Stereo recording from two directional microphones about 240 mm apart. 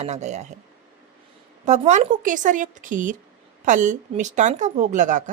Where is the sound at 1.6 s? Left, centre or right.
Right.